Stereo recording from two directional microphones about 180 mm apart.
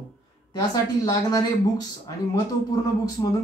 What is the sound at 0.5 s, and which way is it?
Speech, 20° left (ahead or behind).